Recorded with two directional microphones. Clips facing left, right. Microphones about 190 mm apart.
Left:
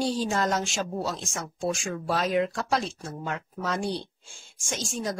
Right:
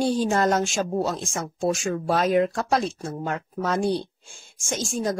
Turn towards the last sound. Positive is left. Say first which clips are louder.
# right 5 dB
turn(degrees=-45)  # may be behind; listen again after turning